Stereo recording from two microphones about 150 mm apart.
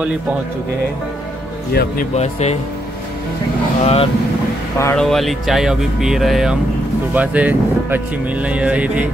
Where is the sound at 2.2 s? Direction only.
45° left (ahead or behind).